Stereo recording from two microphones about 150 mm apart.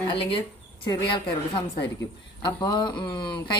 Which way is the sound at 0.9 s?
30° left (ahead or behind).